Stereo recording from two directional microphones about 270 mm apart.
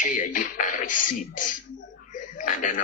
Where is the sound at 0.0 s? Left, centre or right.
Left.